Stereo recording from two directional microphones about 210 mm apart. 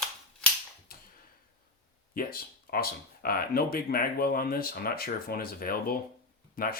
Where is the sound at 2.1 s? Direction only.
45° left (ahead or behind).